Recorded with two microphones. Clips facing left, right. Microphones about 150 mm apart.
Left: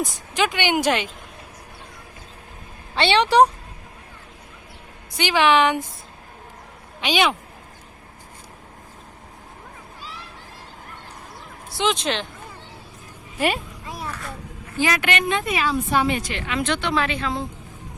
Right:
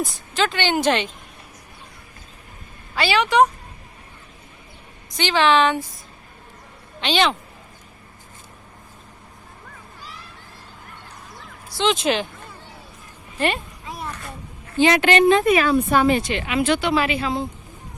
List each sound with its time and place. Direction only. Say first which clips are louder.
0.0 s a woman's voice: even; 15° left (ahead or behind)
2.9 s speech: left 2 dB; 30° left (ahead or behind)
5.1 s a woman's voice: even; 10° left (ahead or behind)
7.0 s a woman's voice: right 1 dB; 10° left (ahead or behind)
11.8 s speech: right 3 dB; centre (ahead or behind)
13.4 s a sound: even; 5° left (ahead or behind)
14.8 s a woman's voice: right 7 dB; 25° right (ahead or behind)
15.4 s a woman's voice: right 6 dB; 55° right (ahead or behind)
16.1 s speech: right 4 dB; 20° right (ahead or behind)
16.6 s speech: right 3 dB; 5° right (ahead or behind)